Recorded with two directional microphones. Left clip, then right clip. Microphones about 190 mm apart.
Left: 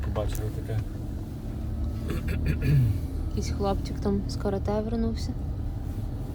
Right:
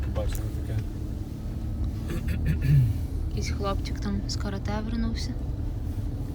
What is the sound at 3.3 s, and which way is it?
A woman's voice, 25° left (ahead or behind).